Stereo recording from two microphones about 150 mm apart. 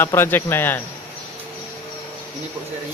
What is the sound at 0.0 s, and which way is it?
Speech, 15° left (ahead or behind).